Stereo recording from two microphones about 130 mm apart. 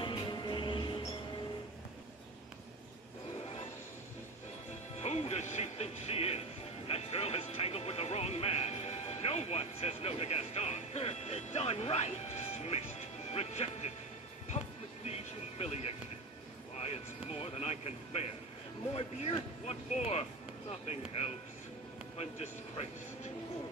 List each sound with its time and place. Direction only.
0.0 s music: 35° left (ahead or behind)
4.9 s music: 55° left (ahead or behind)
15.0 s vehicle: 55° left (ahead or behind)
16.7 s a sound: 55° left (ahead or behind)
18.9 s vehicle: 50° left (ahead or behind)
20.8 s insect: 50° left (ahead or behind)
22.1 s a sound: 55° left (ahead or behind)